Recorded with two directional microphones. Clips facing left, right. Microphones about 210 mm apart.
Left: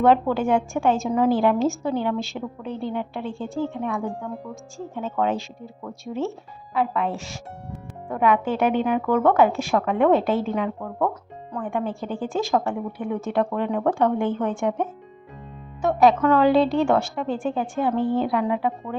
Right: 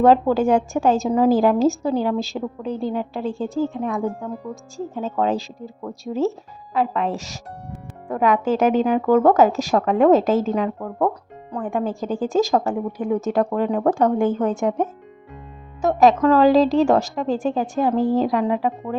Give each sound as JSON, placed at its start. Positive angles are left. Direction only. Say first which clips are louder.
{"t": 0.0, "sound": "a woman's voice", "louder": "right 3 dB", "side_deg": -40}